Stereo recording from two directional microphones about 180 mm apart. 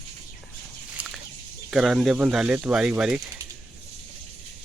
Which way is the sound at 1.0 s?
5° right (ahead or behind).